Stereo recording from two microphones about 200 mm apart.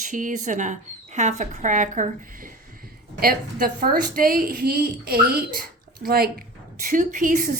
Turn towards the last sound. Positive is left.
turn(degrees=-40)  # may be behind; listen again after turning